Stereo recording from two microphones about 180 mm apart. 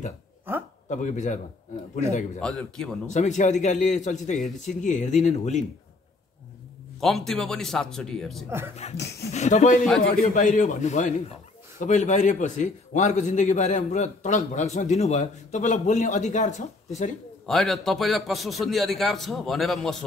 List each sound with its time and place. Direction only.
0.8 s a man's voice: 40° left (ahead or behind)
2.4 s a man's voice: 5° left (ahead or behind)
3.1 s a man's voice: 40° left (ahead or behind)
7.0 s a man's voice: centre (ahead or behind)
8.5 s speech: 15° right (ahead or behind)
8.9 s speech: 65° left (ahead or behind)
9.3 s a man's voice: 40° left (ahead or behind)
17.5 s a man's voice: centre (ahead or behind)